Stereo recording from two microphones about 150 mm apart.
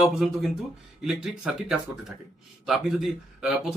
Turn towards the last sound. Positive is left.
turn(degrees=-5)  # may be behind; listen again after turning